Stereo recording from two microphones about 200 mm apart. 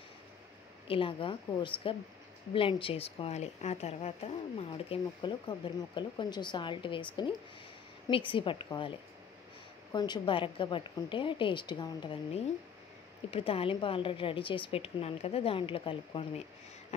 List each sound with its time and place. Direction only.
0.8 s a woman's voice: 25° left (ahead or behind)
9.9 s a woman's voice: 20° left (ahead or behind)